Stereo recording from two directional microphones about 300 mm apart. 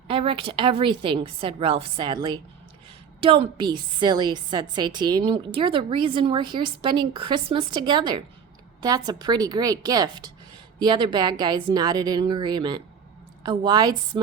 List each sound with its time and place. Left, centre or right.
0.1 s a woman's voice: centre